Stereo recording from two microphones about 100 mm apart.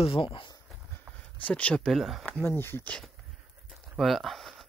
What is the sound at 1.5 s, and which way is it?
Speech, 15° left (ahead or behind).